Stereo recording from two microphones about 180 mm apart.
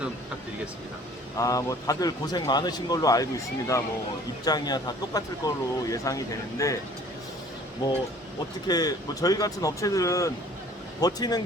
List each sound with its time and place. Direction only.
1.4 s a man's voice: 20° left (ahead or behind)
8.6 s a man's voice: 20° left (ahead or behind)